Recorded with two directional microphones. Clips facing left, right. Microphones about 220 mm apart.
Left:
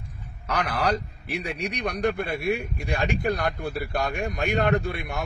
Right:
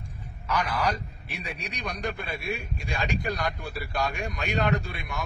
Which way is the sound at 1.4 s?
65° left (ahead or behind).